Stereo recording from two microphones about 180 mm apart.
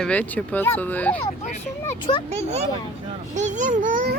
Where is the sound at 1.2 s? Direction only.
35° left (ahead or behind).